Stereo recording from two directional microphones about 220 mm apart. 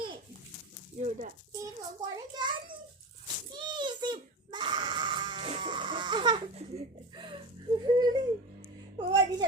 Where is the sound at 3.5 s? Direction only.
20° right (ahead or behind).